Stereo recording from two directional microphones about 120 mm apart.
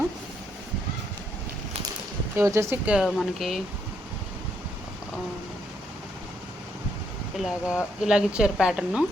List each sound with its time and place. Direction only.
2.3 s speech: 25° right (ahead or behind); by 3.6 s 5° right (ahead or behind)
7.3 s speech: centre (ahead or behind)